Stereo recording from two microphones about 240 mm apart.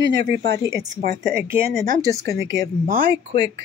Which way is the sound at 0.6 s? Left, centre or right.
Centre.